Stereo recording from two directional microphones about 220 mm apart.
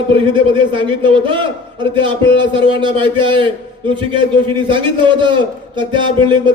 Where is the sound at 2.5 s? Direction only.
20° right (ahead or behind).